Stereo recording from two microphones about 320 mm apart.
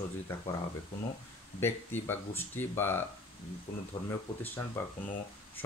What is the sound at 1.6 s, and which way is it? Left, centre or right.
Speech, centre.